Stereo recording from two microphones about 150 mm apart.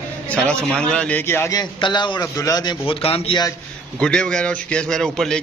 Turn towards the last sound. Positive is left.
turn(degrees=5)  # may be behind; listen again after turning